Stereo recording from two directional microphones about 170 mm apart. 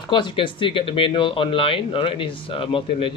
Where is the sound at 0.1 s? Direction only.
30° left (ahead or behind).